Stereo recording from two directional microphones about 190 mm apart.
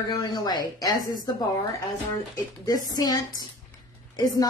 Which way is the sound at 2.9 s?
20° left (ahead or behind).